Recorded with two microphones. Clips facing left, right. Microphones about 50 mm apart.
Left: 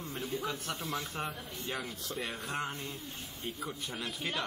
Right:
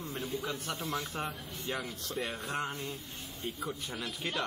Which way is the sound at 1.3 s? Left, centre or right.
Left.